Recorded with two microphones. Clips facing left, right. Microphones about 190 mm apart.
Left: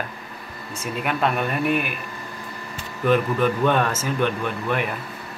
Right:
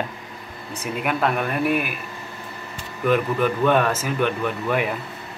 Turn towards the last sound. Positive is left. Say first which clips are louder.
# right 2 dB
turn(degrees=-10)  # may be behind; listen again after turning